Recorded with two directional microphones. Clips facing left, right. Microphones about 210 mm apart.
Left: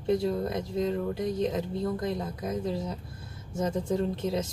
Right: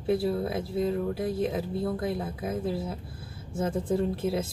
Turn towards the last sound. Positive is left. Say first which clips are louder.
# right 1 dB
turn(degrees=-5)  # may be behind; listen again after turning